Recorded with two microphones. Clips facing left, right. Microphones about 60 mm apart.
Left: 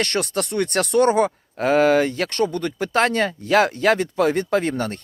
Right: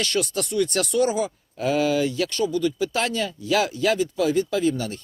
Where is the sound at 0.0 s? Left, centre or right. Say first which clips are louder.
Left 2 dB; left.